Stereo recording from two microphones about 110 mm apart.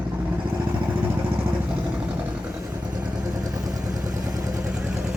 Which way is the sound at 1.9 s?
10° right (ahead or behind).